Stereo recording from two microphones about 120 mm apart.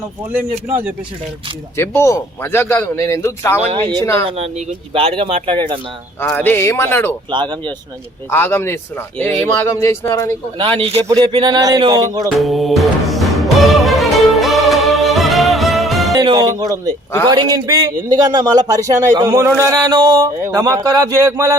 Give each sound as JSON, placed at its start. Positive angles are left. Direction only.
{"t": 1.7, "sound": "a man's voice", "side_deg": 20}
{"t": 3.7, "sound": "speech", "side_deg": -50}
{"t": 6.1, "sound": "a man's voice", "side_deg": 20}
{"t": 7.3, "sound": "a man's voice", "side_deg": -40}
{"t": 8.3, "sound": "a man's voice", "side_deg": 20}
{"t": 10.6, "sound": "a man's voice", "side_deg": -50}
{"t": 12.4, "sound": "music", "side_deg": 0}
{"t": 16.2, "sound": "a man's voice", "side_deg": -35}
{"t": 20.0, "sound": "a man's voice", "side_deg": -40}
{"t": 20.2, "sound": "speech", "side_deg": -25}